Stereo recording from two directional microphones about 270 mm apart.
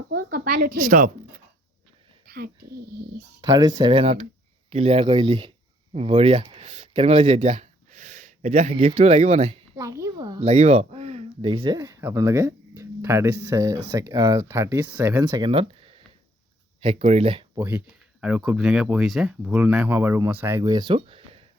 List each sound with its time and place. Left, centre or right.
0.1 s a woman's voice: right
2.2 s a sound: right
2.7 s speech: right
3.8 s speech: centre
9.7 s a child's voice: centre
10.4 s speech: right
17.7 s speech: centre